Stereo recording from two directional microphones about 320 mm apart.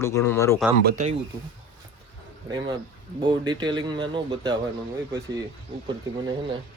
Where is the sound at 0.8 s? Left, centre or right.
Right.